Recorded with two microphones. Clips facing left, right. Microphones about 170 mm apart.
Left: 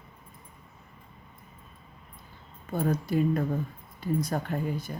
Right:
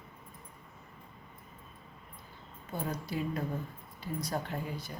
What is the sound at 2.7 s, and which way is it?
Speech, 50° left (ahead or behind).